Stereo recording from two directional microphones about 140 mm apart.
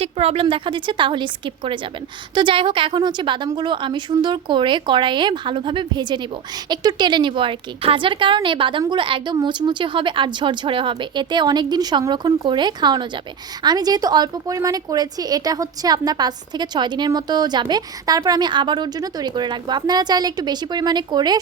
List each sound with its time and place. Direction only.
0.0 s a woman's voice: 45° right (ahead or behind); by 21.3 s 30° right (ahead or behind)